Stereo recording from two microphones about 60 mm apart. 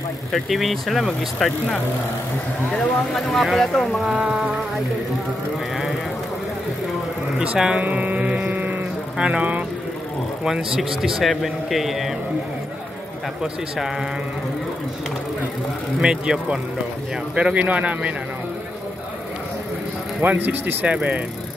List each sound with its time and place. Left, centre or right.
0.3 s speech: centre
3.2 s speech: centre
4.2 s speech: right
7.5 s speech: centre
7.8 s music: right
9.2 s speech: right
10.4 s speech: centre
13.4 s speech: centre
16.0 s speech: centre
20.2 s speech: right
20.8 s speech: right